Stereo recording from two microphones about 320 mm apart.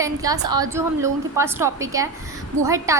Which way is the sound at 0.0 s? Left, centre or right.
Centre.